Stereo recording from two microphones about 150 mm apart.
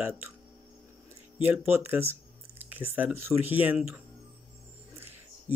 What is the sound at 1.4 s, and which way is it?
Speech, 15° right (ahead or behind).